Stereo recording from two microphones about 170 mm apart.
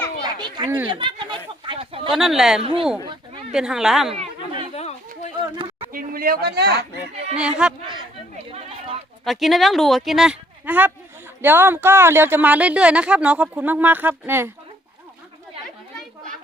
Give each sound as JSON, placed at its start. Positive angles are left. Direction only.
{"t": 0.2, "sound": "a sound", "side_deg": -25}
{"t": 2.1, "sound": "speech", "side_deg": 0}
{"t": 4.7, "sound": "chatter", "side_deg": 40}
{"t": 5.9, "sound": "speech", "side_deg": -55}
{"t": 7.3, "sound": "speech", "side_deg": -5}
{"t": 8.4, "sound": "chatter", "side_deg": -35}
{"t": 9.2, "sound": "speech", "side_deg": 0}